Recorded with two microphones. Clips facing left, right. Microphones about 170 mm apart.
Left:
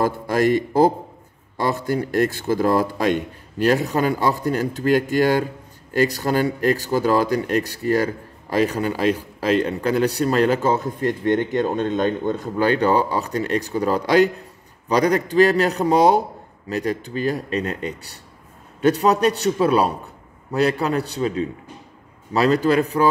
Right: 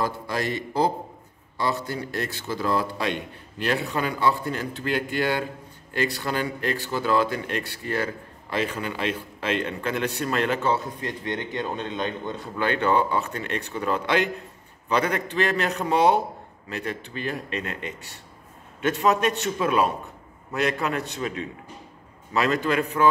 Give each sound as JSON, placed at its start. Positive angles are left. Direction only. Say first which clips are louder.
{"t": 0.0, "sound": "a man's voice", "louder": "left 8 dB", "side_deg": 45}